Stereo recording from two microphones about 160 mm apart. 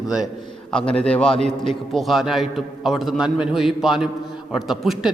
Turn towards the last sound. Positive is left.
turn(degrees=0)  # may be behind; listen again after turning